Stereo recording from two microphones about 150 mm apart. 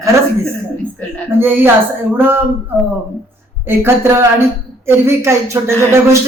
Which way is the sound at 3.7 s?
15° right (ahead or behind).